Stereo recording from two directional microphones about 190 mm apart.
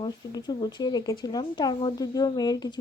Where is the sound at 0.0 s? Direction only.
20° left (ahead or behind).